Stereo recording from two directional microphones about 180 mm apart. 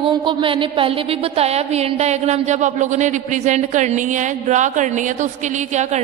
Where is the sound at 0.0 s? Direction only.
30° right (ahead or behind).